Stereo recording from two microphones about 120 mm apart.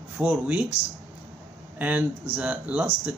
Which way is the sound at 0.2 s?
10° right (ahead or behind).